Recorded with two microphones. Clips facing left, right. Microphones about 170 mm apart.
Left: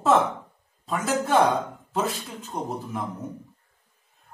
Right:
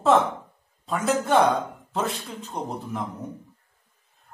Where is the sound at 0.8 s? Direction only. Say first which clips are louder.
Right 1 dB; centre (ahead or behind).